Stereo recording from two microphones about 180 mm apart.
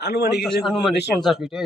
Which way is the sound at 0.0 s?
70° left (ahead or behind).